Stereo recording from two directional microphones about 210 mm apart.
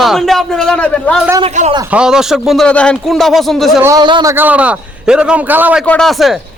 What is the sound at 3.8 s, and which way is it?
Speech, 20° right (ahead or behind).